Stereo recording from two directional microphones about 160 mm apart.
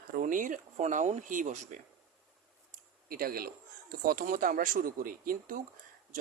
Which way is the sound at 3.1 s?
70° right (ahead or behind).